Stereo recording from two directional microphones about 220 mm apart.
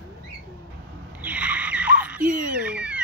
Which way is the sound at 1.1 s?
5° right (ahead or behind).